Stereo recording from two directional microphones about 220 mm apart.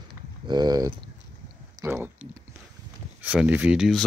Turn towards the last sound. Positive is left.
turn(degrees=0)  # may be behind; listen again after turning